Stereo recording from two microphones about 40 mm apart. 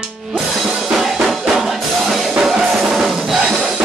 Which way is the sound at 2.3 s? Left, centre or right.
Centre.